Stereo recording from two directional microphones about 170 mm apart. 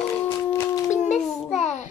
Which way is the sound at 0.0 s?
15° left (ahead or behind).